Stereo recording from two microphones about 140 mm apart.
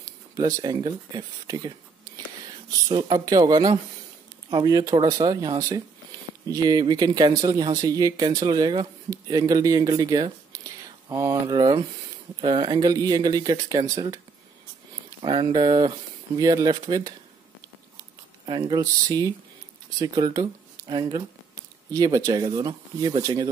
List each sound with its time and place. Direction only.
0.6 s speech: 30° right (ahead or behind)
18.4 s speech: 35° right (ahead or behind)